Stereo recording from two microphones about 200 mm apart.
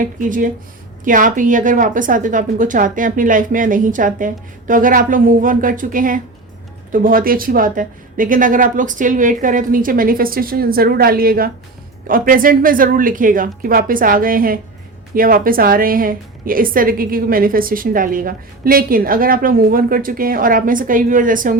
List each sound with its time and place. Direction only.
0.0 s a woman's voice: 40° right (ahead or behind)